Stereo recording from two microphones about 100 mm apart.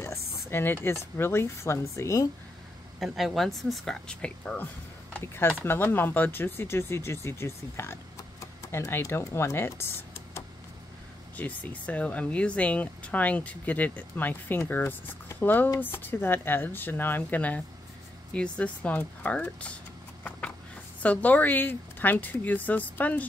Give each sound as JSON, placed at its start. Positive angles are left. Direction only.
{"t": 0.0, "sound": "a sound", "side_deg": 25}
{"t": 1.1, "sound": "speech", "side_deg": 25}
{"t": 3.0, "sound": "speech", "side_deg": 0}
{"t": 5.2, "sound": "speech", "side_deg": 25}
{"t": 20.2, "sound": "a sound", "side_deg": 15}
{"t": 21.0, "sound": "speech", "side_deg": 15}